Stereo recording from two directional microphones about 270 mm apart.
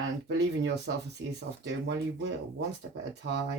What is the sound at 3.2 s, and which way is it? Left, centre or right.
Speech, right.